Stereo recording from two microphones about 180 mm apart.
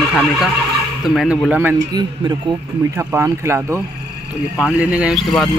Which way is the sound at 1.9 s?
25° right (ahead or behind).